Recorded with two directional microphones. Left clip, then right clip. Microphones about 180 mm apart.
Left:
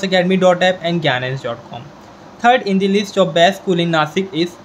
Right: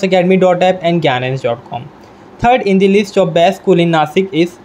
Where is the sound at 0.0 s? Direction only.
25° right (ahead or behind).